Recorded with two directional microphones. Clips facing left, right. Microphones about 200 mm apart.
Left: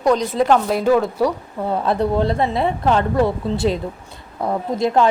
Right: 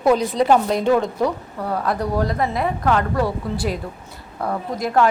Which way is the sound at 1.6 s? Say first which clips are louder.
Left 4 dB; 25° left (ahead or behind).